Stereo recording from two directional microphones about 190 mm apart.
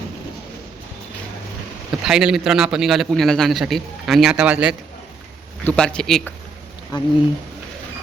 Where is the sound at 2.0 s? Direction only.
5° right (ahead or behind).